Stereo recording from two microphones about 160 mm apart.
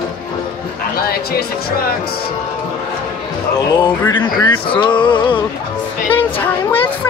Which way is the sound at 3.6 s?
25° left (ahead or behind).